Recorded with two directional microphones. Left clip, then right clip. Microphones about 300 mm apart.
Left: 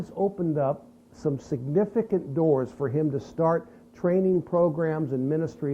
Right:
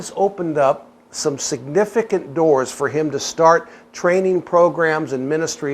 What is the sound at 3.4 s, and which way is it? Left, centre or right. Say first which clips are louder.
Speech: right 12 dB; centre.